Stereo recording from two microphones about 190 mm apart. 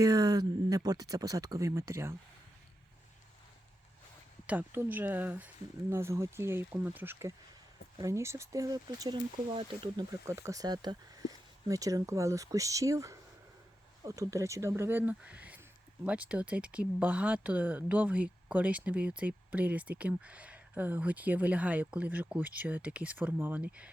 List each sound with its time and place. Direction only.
0.0 s speech: 20° right (ahead or behind)
4.4 s speech: 10° right (ahead or behind)